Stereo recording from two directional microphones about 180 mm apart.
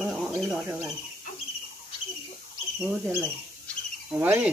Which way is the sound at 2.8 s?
10° right (ahead or behind).